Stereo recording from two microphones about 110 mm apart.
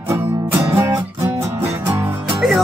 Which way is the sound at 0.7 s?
25° right (ahead or behind).